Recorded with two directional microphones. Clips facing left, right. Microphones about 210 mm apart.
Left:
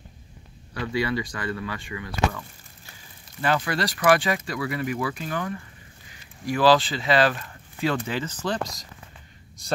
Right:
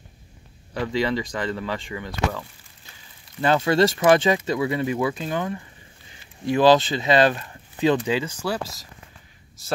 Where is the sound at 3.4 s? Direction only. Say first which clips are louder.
Right 6 dB; 25° right (ahead or behind).